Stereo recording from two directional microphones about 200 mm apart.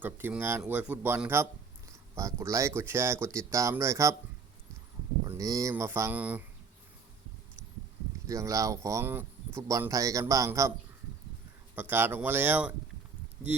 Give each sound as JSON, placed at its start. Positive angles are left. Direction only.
{"t": 0.0, "sound": "speech", "side_deg": -10}
{"t": 5.2, "sound": "speech", "side_deg": -15}
{"t": 8.3, "sound": "speech", "side_deg": -15}
{"t": 11.7, "sound": "speech", "side_deg": -10}